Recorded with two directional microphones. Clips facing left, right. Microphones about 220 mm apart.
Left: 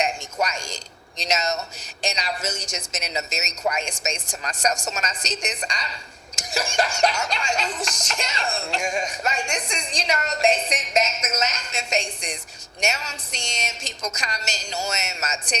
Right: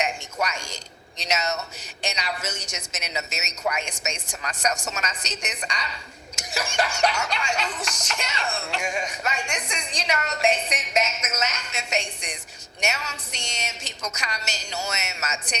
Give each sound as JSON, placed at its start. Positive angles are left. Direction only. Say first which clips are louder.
{"t": 0.0, "sound": "a sound", "louder": "left 2 dB", "side_deg": 30}
{"t": 1.3, "sound": "music", "louder": "left 2 dB", "side_deg": 30}
{"t": 12.8, "sound": "a woman's voice", "louder": "left 2 dB", "side_deg": 30}